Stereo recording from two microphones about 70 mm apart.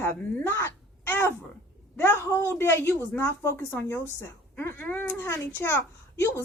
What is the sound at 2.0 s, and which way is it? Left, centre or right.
Speech, left.